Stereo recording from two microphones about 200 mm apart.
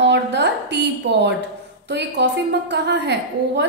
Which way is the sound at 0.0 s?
60° right (ahead or behind).